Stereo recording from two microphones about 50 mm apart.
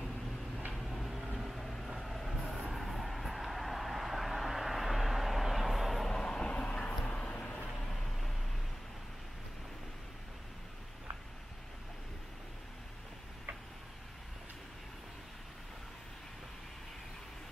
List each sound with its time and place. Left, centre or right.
0.7 s a sound: centre
1.4 s train: centre
2.7 s vehicle: centre
6.1 s vehicle: centre
7.8 s vehicle: centre